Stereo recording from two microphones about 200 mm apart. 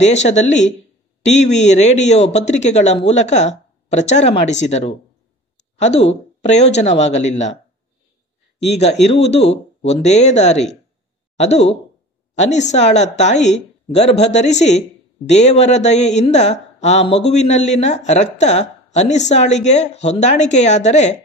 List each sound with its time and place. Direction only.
0.0 s speech: 35° left (ahead or behind)
8.6 s a woman's voice: 30° left (ahead or behind)